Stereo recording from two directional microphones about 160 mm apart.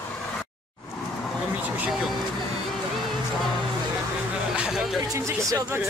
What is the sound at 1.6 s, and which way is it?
Speech, centre (ahead or behind).